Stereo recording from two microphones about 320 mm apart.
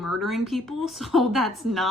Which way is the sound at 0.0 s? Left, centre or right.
Centre.